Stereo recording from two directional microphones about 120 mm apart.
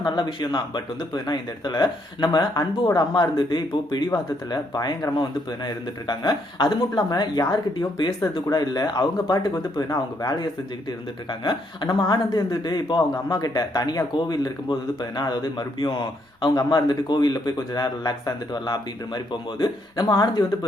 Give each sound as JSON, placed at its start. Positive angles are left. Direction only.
{"t": 0.0, "sound": "speech", "side_deg": 40}